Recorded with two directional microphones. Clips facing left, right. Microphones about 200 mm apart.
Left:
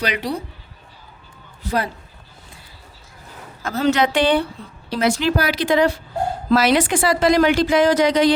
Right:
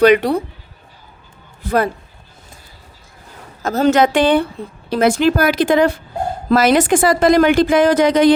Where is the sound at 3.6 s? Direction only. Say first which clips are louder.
Right 5 dB; 45° right (ahead or behind).